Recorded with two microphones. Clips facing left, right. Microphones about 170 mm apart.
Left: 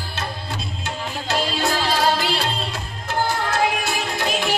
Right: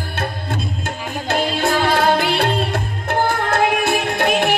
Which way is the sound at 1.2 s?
55° right (ahead or behind).